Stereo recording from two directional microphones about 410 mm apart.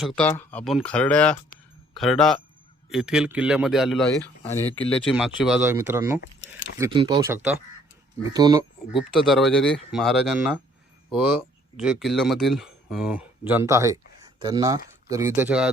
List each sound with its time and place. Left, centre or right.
0.0 s speech: centre
6.2 s keys jangling: left
6.7 s speech: centre